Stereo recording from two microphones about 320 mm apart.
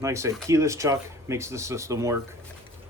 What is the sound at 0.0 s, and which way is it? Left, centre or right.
Speech, centre.